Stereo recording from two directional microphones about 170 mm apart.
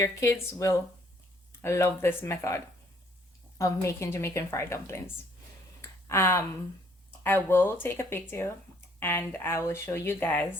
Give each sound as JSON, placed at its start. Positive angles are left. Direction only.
{"t": 0.0, "sound": "speech", "side_deg": 20}
{"t": 3.6, "sound": "speech", "side_deg": 15}
{"t": 6.1, "sound": "speech", "side_deg": 15}